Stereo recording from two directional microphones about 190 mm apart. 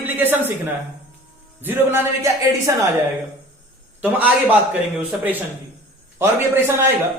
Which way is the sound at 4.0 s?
10° right (ahead or behind).